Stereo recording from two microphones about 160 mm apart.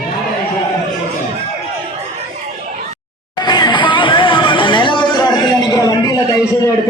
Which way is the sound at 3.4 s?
25° left (ahead or behind).